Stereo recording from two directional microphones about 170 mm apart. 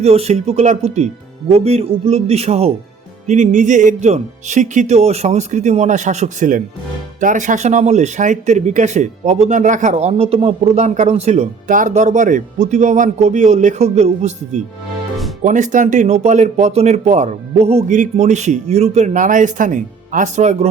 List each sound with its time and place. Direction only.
0.0 s a man's voice: 35° right (ahead or behind)
15.4 s a man's voice: 45° right (ahead or behind)